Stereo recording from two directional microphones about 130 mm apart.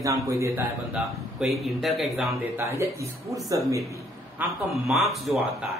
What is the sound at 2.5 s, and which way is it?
Speech, 20° right (ahead or behind).